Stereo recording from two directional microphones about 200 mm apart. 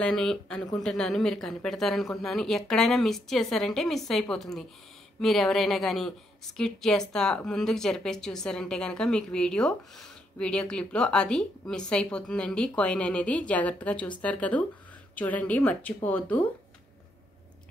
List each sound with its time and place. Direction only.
0.0 s a woman's voice: 5° left (ahead or behind)